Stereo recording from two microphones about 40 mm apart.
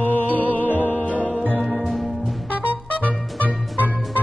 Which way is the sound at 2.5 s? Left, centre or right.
Right.